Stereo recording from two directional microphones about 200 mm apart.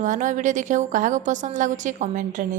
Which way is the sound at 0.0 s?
40° right (ahead or behind).